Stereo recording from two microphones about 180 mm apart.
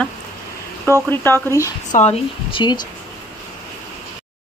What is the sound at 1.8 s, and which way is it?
Speech, 40° left (ahead or behind).